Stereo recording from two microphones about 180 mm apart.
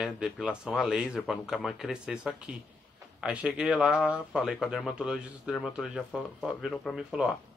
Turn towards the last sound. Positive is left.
turn(degrees=-5)  # may be behind; listen again after turning